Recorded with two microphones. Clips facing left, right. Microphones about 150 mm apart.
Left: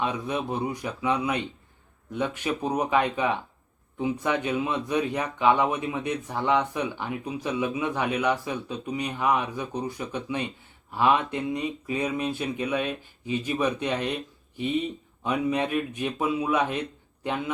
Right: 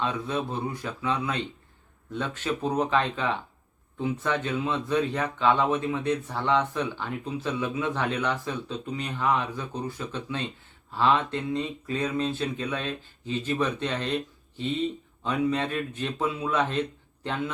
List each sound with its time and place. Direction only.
0.0 s speech: 15° left (ahead or behind)